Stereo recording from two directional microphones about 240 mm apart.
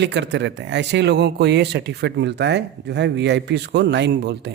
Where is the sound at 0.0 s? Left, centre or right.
Right.